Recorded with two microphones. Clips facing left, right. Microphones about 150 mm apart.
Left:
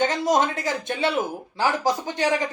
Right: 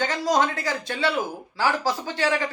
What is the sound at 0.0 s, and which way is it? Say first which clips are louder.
Speech: left 2 dB; 20° left (ahead or behind).